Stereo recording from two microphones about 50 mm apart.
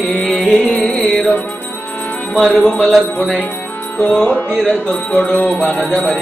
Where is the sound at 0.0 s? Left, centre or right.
Left.